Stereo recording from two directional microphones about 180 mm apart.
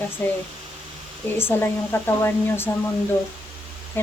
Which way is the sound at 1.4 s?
10° left (ahead or behind).